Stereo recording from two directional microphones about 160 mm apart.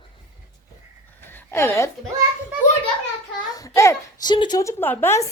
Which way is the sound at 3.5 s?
20° left (ahead or behind).